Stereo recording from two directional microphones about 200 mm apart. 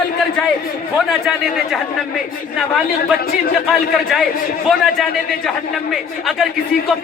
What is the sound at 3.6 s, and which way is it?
Speech, centre (ahead or behind).